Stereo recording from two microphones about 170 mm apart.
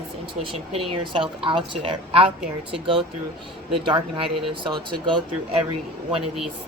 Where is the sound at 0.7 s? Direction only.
30° right (ahead or behind).